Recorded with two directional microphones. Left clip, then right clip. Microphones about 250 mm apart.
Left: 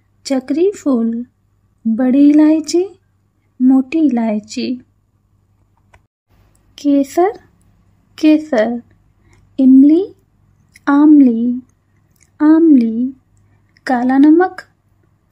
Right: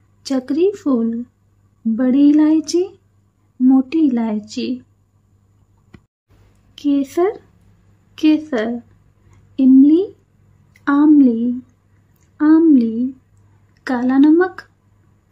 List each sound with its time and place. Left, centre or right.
0.2 s speech: centre
6.7 s speech: centre
9.3 s a sound: centre
11.1 s speech: centre